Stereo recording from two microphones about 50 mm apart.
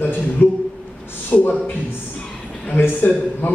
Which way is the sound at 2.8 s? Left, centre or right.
Left.